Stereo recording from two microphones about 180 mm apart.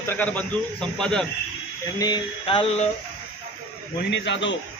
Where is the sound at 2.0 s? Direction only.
25° left (ahead or behind).